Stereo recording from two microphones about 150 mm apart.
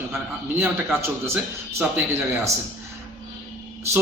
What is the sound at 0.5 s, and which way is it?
Speech, 15° right (ahead or behind).